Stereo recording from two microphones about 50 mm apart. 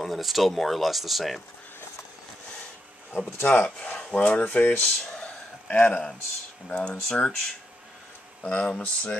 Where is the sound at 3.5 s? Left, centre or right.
Left.